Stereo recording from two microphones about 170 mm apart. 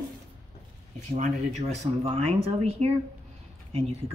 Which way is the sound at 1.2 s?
40° right (ahead or behind).